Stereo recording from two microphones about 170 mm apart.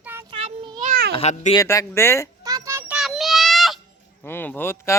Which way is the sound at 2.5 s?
20° right (ahead or behind).